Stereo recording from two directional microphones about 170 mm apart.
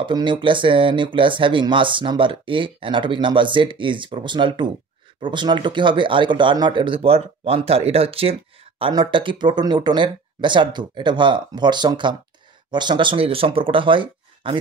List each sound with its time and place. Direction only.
0.0 s speech: 25° right (ahead or behind)